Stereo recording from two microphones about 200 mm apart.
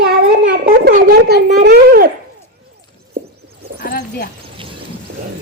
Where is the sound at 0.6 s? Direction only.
40° right (ahead or behind).